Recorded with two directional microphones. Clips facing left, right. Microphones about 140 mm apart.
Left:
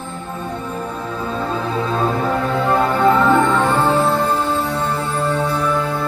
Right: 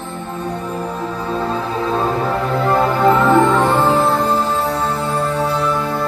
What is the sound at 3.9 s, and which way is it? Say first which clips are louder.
Music: right 1 dB; 35° right (ahead or behind).